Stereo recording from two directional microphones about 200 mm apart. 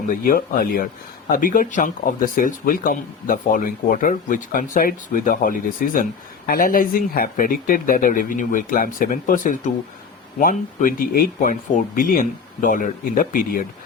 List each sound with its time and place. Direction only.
0.1 s speech: 45° left (ahead or behind)